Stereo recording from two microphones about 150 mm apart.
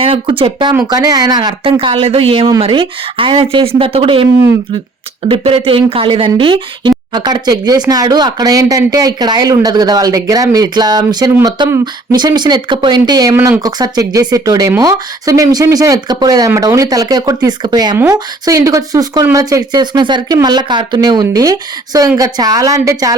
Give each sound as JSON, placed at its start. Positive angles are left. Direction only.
{"t": 0.0, "sound": "speech", "side_deg": -35}
{"t": 5.3, "sound": "speech", "side_deg": -40}